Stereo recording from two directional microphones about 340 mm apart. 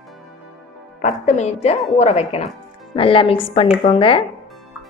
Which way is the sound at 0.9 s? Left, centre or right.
Left.